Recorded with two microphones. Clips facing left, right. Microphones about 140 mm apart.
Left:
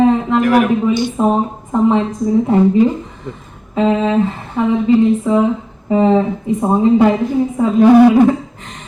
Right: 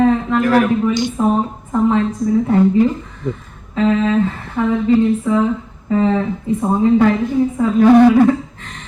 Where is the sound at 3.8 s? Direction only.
20° left (ahead or behind).